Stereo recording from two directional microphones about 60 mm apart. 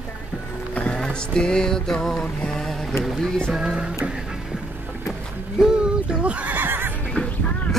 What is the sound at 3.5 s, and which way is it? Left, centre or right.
Music, centre.